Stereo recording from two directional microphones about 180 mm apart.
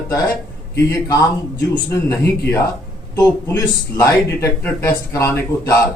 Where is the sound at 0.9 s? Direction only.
20° left (ahead or behind).